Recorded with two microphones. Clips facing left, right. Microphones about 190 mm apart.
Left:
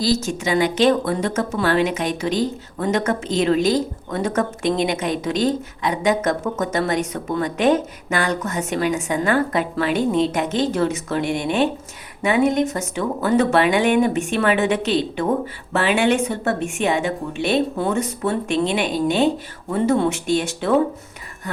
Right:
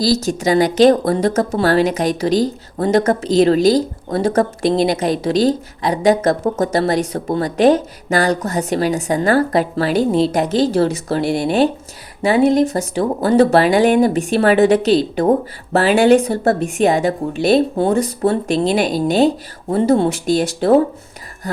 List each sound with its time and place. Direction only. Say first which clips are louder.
0.0 s speech: right 4 dB; 35° right (ahead or behind)